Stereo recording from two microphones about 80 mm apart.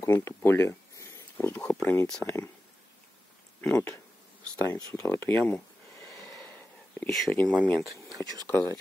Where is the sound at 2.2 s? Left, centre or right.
Left.